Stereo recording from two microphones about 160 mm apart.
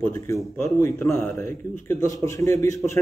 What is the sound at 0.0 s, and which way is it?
A man's voice, 15° left (ahead or behind).